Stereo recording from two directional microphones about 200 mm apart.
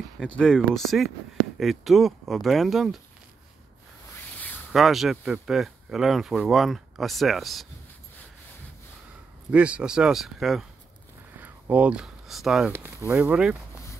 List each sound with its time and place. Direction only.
0.4 s speech: 5° left (ahead or behind)
4.4 s speech: 5° left (ahead or behind)
9.5 s speech: 5° right (ahead or behind)